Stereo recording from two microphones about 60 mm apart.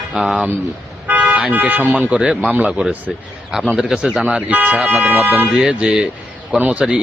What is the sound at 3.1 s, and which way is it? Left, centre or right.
Speech, centre.